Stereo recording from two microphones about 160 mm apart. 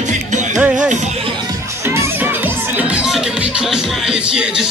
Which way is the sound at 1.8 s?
15° right (ahead or behind).